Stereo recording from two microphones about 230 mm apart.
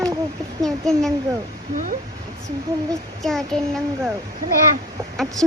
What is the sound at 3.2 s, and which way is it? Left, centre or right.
Speech, centre.